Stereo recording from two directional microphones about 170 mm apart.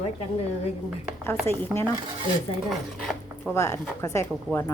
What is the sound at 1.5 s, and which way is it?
Speech, 35° right (ahead or behind).